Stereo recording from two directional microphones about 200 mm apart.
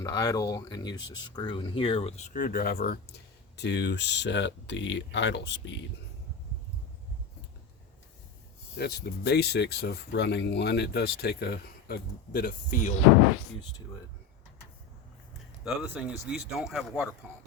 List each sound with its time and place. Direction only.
0.0 s speech: 20° left (ahead or behind); by 5.8 s 60° left (ahead or behind)
8.7 s speech: 55° left (ahead or behind)
15.6 s speech: 5° right (ahead or behind)